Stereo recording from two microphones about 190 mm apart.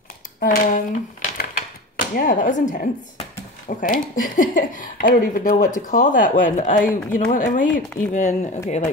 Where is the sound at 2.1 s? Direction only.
45° left (ahead or behind).